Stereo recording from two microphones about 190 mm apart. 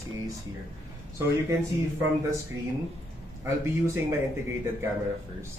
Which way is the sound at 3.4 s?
15° right (ahead or behind).